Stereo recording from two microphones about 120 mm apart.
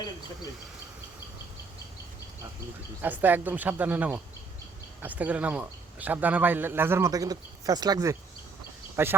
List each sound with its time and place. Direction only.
3.0 s a man's voice: 15° right (ahead or behind)
7.1 s speech: 30° right (ahead or behind)
9.0 s speech: 20° right (ahead or behind)